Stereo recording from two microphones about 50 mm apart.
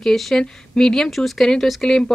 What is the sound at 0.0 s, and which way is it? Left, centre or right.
A woman's voice, centre.